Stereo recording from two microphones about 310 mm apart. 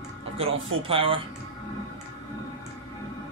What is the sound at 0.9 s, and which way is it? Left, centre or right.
Speech, centre.